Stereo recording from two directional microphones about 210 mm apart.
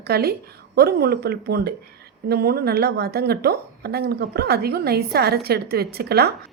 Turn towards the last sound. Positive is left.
turn(degrees=-50)  # may be behind; listen again after turning